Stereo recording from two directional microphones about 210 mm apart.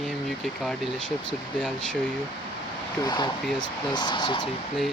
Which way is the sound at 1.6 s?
5° left (ahead or behind).